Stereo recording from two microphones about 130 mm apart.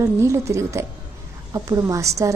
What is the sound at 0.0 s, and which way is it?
A woman's voice, 20° right (ahead or behind).